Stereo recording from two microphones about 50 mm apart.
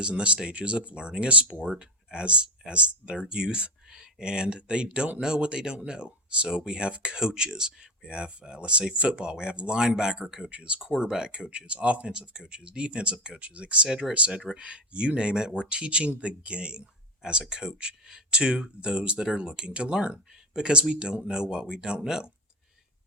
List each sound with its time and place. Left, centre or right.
0.0 s speech: right